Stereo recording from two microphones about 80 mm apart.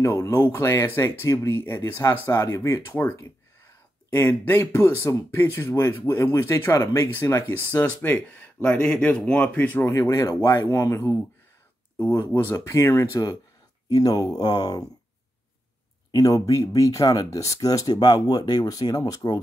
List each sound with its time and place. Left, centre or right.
0.0 s speech: left; by 9.8 s centre
9.8 s speech: left
12.0 s speech: left
16.1 s speech: left